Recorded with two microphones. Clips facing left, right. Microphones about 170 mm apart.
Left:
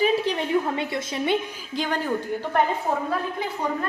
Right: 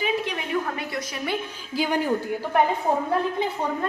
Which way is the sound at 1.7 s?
10° right (ahead or behind).